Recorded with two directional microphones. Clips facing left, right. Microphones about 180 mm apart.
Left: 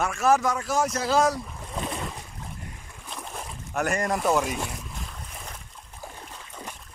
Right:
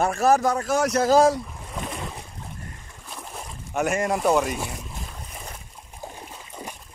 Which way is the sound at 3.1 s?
5° right (ahead or behind).